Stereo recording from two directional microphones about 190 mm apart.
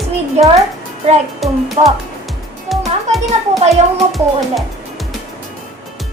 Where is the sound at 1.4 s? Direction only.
Centre (ahead or behind).